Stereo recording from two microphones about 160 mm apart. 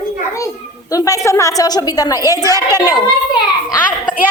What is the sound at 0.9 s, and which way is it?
A woman's voice, 20° left (ahead or behind).